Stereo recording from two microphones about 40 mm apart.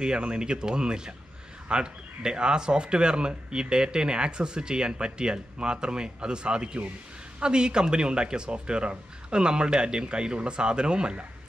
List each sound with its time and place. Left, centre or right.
0.0 s speech: right